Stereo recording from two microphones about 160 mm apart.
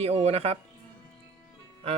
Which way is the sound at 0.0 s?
40° right (ahead or behind).